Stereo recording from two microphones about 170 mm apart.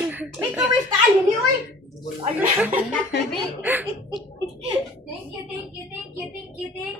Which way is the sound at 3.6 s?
10° right (ahead or behind).